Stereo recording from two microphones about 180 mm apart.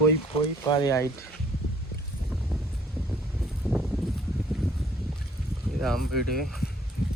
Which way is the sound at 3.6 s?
Centre (ahead or behind).